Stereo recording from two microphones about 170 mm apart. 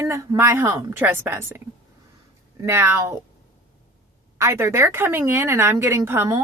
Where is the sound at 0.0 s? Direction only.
15° right (ahead or behind).